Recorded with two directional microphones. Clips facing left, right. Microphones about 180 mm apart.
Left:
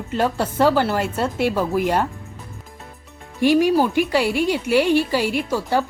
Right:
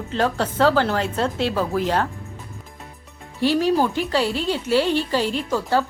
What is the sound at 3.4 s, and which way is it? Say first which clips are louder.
A woman's voice: left 3 dB; 15° left (ahead or behind).